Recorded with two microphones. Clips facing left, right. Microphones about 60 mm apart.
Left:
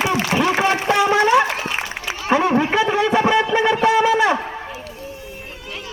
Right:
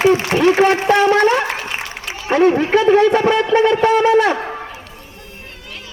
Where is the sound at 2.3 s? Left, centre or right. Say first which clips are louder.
Right 4 dB; centre.